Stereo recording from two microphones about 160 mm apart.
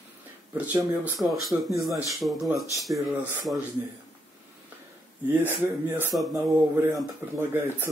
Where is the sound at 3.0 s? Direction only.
15° right (ahead or behind).